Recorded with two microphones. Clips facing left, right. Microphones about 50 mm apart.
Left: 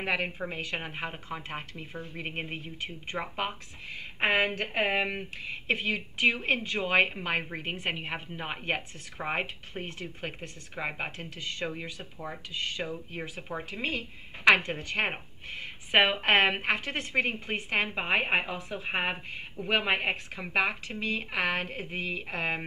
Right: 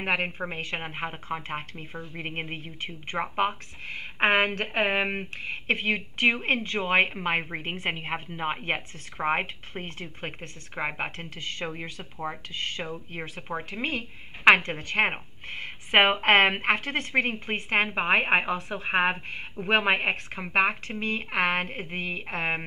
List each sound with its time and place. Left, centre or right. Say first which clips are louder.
0.0 s speech: right 3 dB; right
13.4 s speech: right 5 dB; right
13.7 s speech: right 2 dB; right